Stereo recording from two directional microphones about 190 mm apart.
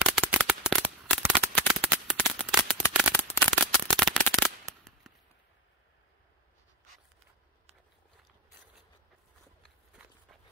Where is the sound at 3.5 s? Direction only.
5° left (ahead or behind).